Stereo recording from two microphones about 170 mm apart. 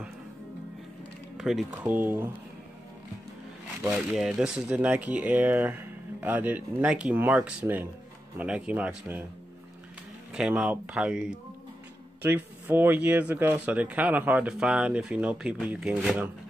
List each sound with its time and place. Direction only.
1.4 s speech: centre (ahead or behind)
4.1 s speech: centre (ahead or behind)
10.3 s speech: 5° right (ahead or behind)